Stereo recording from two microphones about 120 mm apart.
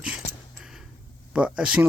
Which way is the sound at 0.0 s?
10° right (ahead or behind).